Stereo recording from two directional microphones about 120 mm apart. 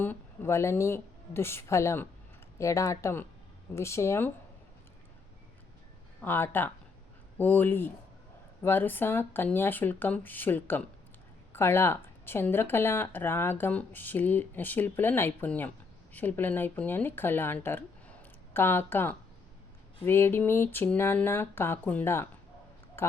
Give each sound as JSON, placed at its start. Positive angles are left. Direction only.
{"t": 0.0, "sound": "a woman's voice", "side_deg": 20}
{"t": 6.2, "sound": "speech", "side_deg": 15}
{"t": 23.0, "sound": "a sound", "side_deg": 20}